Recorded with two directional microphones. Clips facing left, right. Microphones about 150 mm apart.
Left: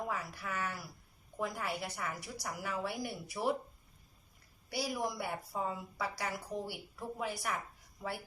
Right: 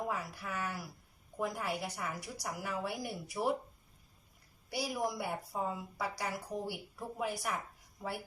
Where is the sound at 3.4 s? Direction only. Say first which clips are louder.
Right 1 dB; 20° right (ahead or behind).